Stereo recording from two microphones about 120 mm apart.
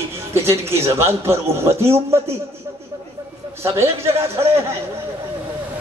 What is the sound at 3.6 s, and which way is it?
A man's voice, 20° right (ahead or behind).